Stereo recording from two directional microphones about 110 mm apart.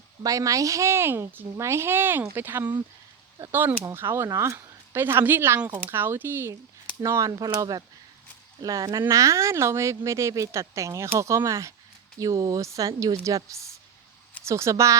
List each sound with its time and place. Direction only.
0.2 s speech: 30° right (ahead or behind)